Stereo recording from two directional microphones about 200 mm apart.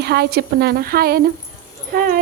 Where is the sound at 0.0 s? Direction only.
55° right (ahead or behind).